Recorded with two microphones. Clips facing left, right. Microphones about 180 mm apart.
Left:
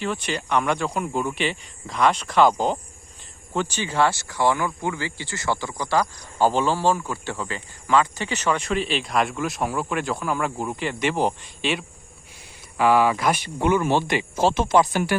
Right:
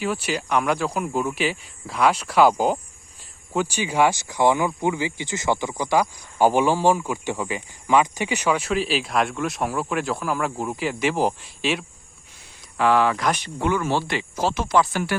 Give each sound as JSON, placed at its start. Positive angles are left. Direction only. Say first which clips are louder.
{"t": 0.0, "sound": "speech", "louder": "right 2 dB", "side_deg": -5}